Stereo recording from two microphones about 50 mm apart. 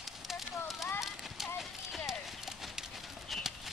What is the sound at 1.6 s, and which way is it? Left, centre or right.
Horse, centre.